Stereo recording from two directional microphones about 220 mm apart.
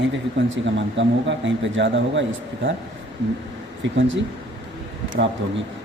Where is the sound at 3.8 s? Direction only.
55° right (ahead or behind).